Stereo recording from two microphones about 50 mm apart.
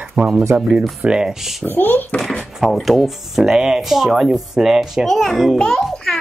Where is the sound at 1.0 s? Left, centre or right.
Centre.